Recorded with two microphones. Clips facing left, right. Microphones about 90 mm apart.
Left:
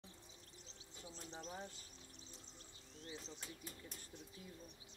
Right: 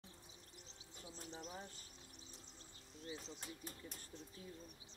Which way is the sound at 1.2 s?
35° left (ahead or behind).